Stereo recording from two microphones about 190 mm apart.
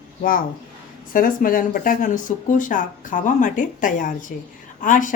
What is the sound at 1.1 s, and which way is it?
Speech, 45° left (ahead or behind).